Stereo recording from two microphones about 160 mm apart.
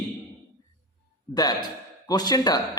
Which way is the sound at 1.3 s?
25° left (ahead or behind).